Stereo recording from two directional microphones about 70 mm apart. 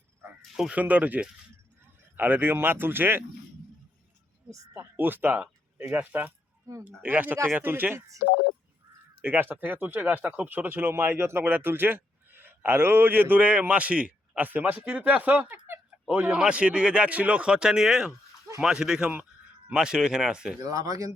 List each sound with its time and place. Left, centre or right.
0.7 s speech: right
4.9 s speech: right
7.9 s speech: right
9.2 s speech: right; by 20.6 s centre
20.6 s speech: right